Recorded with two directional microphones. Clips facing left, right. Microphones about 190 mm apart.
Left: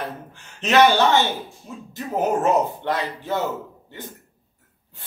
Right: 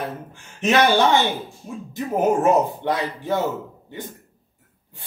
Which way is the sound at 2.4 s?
10° right (ahead or behind).